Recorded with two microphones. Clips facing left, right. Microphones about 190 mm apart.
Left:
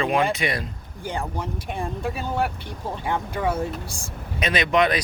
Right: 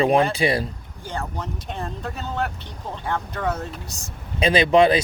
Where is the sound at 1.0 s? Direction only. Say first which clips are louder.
Left 1 dB; 15° left (ahead or behind).